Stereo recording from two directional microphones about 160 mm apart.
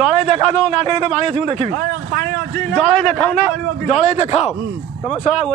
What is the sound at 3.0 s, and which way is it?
Speech, 10° left (ahead or behind).